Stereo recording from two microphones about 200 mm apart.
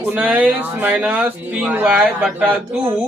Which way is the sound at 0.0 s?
10° right (ahead or behind).